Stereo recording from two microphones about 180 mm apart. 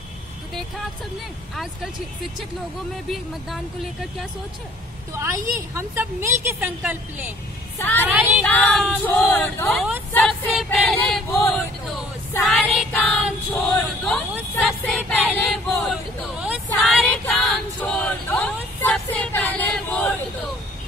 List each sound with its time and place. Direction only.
1.5 s speech: centre (ahead or behind)
3.1 s speech: centre (ahead or behind)
5.1 s a woman's voice: 15° right (ahead or behind)
7.8 s speech: 10° left (ahead or behind)
8.1 s a woman's voice: 10° right (ahead or behind)
8.5 s speech: 10° left (ahead or behind)
10.6 s a sound: centre (ahead or behind)
15.4 s choir: 5° left (ahead or behind)
16.7 s a sound: 10° left (ahead or behind)